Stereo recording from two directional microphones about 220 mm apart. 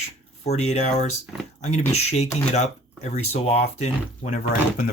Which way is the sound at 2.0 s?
30° left (ahead or behind).